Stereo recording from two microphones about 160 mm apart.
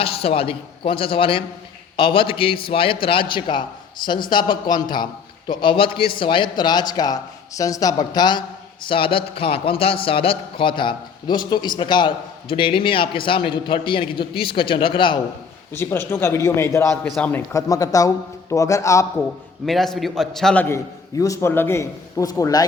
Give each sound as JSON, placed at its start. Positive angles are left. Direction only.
{"t": 0.0, "sound": "speech", "side_deg": 35}
{"t": 15.7, "sound": "a man's voice", "side_deg": 15}
{"t": 19.6, "sound": "a man's voice", "side_deg": 0}